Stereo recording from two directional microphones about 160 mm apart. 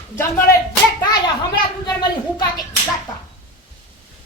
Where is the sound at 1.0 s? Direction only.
25° left (ahead or behind).